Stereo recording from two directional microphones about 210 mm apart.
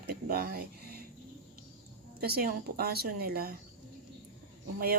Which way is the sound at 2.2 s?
45° right (ahead or behind).